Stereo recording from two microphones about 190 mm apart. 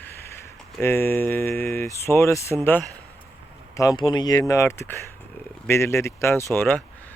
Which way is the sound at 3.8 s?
20° left (ahead or behind).